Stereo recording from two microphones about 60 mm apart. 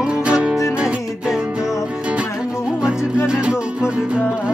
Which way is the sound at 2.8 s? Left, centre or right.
Centre.